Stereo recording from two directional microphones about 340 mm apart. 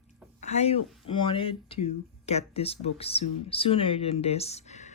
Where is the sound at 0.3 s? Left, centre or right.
Centre.